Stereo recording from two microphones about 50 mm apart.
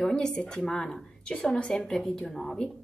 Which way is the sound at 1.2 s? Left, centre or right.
Left.